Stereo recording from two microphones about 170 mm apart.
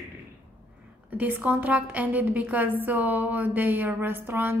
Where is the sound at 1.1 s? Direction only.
10° right (ahead or behind).